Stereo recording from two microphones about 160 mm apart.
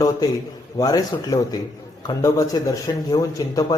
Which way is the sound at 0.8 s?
25° left (ahead or behind).